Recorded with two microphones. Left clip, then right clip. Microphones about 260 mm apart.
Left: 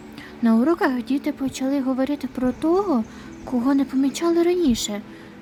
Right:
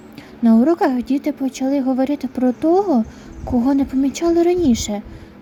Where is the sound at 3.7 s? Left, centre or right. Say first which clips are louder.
Right 1 dB; centre.